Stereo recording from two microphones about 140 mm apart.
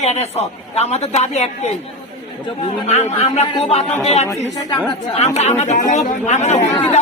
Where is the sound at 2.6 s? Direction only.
55° left (ahead or behind).